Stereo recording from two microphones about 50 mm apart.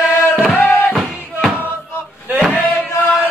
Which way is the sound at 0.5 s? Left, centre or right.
Left.